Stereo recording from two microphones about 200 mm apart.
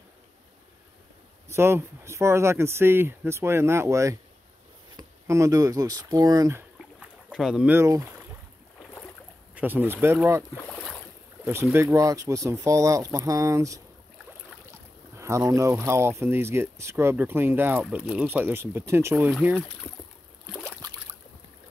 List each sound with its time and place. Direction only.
1.5 s speech: 10° right (ahead or behind)
7.0 s speech: 5° right (ahead or behind)
9.6 s speech: 10° right (ahead or behind)
10.5 s boat: 10° left (ahead or behind)
11.4 s speech: 10° right (ahead or behind)
15.1 s speech: 15° right (ahead or behind)